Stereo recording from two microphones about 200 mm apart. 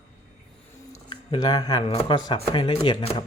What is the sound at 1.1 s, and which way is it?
Speech, 20° left (ahead or behind).